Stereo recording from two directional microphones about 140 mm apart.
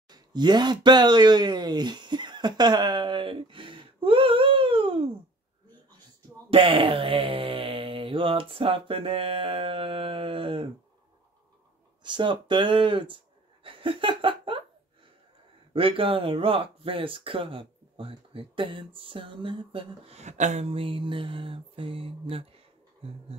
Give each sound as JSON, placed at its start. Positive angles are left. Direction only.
{"t": 0.1, "sound": "speech", "side_deg": -30}
{"t": 6.5, "sound": "speech", "side_deg": -40}
{"t": 12.0, "sound": "speech", "side_deg": -35}
{"t": 13.7, "sound": "laughter", "side_deg": -40}
{"t": 15.7, "sound": "speech", "side_deg": -40}
{"t": 20.2, "sound": "speech", "side_deg": -60}